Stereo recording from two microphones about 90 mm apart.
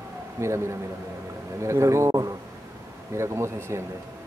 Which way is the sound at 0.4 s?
30° right (ahead or behind).